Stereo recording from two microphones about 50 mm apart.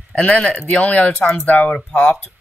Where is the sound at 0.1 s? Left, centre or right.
Left.